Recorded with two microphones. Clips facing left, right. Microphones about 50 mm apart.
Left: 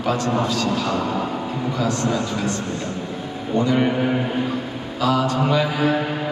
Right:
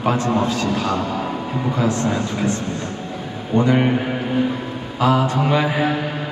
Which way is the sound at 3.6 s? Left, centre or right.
Right.